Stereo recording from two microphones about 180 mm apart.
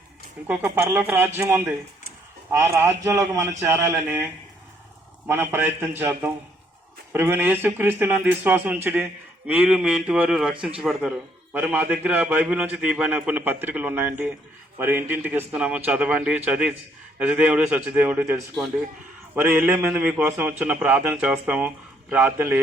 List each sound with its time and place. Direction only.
0.4 s a man's voice: 10° right (ahead or behind)
3.0 s a man's voice: 15° right (ahead or behind)
9.5 s a sound: 5° right (ahead or behind)
11.5 s a man's voice: 10° right (ahead or behind)
16.5 s a sound: 5° right (ahead or behind)
17.2 s a man's voice: 5° right (ahead or behind)